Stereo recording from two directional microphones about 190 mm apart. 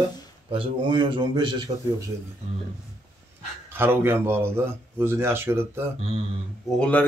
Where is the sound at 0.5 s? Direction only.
25° right (ahead or behind).